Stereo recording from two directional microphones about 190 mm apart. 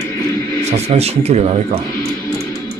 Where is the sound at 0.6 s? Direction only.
35° right (ahead or behind).